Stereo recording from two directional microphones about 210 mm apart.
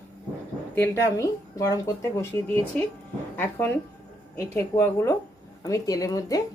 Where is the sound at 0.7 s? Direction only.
10° left (ahead or behind).